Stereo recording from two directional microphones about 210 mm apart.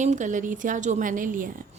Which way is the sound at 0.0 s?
35° right (ahead or behind).